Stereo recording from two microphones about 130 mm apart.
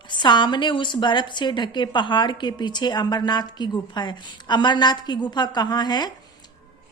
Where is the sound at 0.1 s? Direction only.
35° left (ahead or behind).